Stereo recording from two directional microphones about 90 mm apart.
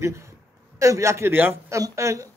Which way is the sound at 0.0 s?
35° right (ahead or behind).